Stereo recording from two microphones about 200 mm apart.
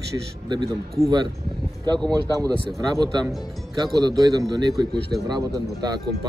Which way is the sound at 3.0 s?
20° right (ahead or behind).